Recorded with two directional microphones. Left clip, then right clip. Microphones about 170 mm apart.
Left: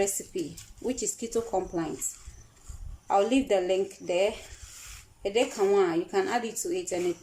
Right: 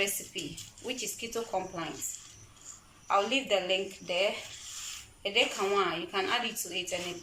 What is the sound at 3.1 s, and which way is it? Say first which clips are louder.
A woman's voice: left 3 dB; 45° left (ahead or behind).